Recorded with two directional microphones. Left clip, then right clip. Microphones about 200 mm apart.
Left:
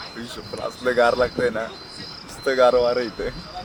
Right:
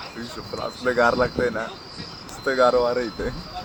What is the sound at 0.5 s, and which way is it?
Speech, 10° left (ahead or behind).